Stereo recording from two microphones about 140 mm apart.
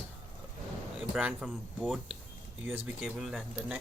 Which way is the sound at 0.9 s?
5° right (ahead or behind).